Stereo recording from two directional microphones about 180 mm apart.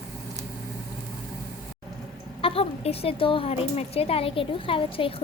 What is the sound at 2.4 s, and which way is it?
Speech, 30° left (ahead or behind).